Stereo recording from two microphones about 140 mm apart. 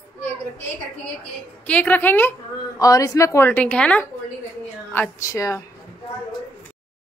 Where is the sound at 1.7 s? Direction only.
10° left (ahead or behind).